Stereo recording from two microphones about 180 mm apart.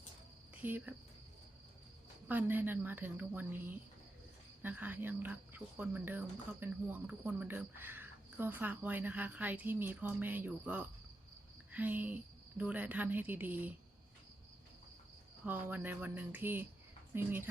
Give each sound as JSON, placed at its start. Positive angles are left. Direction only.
{"t": 0.5, "sound": "speech", "side_deg": -10}
{"t": 2.2, "sound": "speech", "side_deg": -10}
{"t": 15.4, "sound": "speech", "side_deg": -10}